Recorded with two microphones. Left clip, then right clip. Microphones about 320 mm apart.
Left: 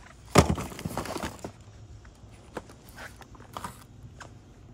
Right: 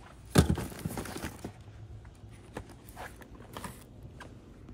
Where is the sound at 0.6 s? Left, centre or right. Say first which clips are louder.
Left 4 dB; centre.